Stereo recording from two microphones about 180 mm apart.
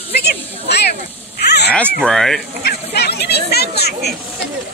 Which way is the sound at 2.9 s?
65° left (ahead or behind).